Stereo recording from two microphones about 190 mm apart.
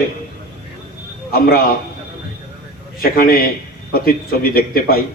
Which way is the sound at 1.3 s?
50° left (ahead or behind).